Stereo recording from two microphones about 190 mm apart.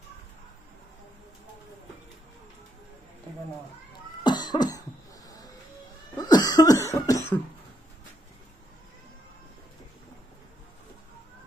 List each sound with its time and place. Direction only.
4.2 s cough: 25° left (ahead or behind)
6.1 s cough: 20° left (ahead or behind)